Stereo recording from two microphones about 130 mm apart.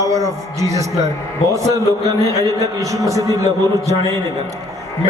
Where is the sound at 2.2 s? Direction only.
25° right (ahead or behind).